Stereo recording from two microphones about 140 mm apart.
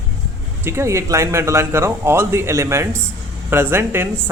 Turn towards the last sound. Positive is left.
turn(degrees=-15)  # may be behind; listen again after turning